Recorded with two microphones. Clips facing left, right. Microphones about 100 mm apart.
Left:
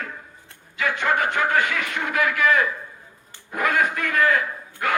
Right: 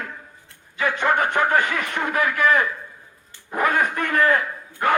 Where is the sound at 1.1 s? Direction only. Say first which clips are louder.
Right 2 dB; 20° right (ahead or behind).